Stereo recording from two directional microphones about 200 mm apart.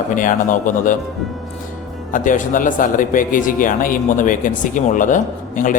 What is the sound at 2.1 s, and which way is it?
Speech, 40° left (ahead or behind).